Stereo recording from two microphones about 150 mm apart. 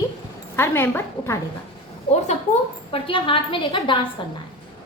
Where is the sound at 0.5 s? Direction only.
15° left (ahead or behind).